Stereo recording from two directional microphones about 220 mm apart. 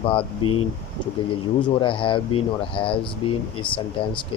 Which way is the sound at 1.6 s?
20° left (ahead or behind).